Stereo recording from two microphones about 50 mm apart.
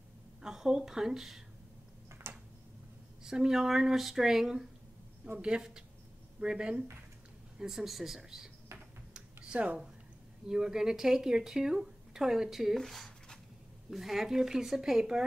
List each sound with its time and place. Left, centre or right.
0.4 s speech: centre
2.3 s a sound: right
3.3 s speech: centre
9.1 s computer keyboard: right
10.5 s speech: centre